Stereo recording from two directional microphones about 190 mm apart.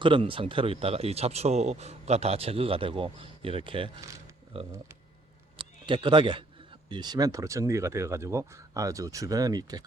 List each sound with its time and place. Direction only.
0.0 s a man's voice: 25° right (ahead or behind)
5.5 s a sound: 25° right (ahead or behind)
6.8 s speech: 25° right (ahead or behind)